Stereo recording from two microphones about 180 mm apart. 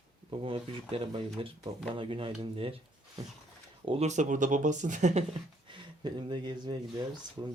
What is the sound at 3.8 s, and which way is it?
Speech, 35° right (ahead or behind).